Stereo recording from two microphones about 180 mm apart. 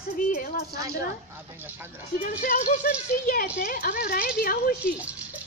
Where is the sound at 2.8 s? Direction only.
55° left (ahead or behind).